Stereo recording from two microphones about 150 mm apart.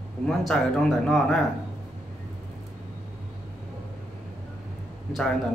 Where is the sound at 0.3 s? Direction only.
Centre (ahead or behind).